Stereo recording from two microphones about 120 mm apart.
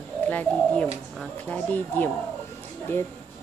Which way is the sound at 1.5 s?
15° left (ahead or behind).